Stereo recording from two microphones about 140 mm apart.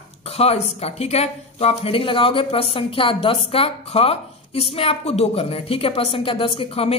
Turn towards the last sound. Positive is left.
turn(degrees=45)  # may be behind; listen again after turning